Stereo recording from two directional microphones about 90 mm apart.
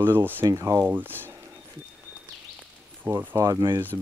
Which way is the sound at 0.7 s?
25° right (ahead or behind).